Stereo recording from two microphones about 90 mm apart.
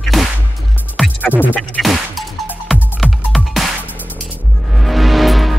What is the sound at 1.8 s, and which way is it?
Music, centre (ahead or behind).